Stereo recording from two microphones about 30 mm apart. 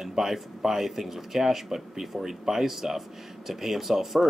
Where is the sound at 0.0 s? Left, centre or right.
Centre.